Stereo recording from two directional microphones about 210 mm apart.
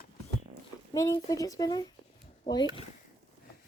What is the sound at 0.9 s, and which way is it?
Speech, 15° left (ahead or behind).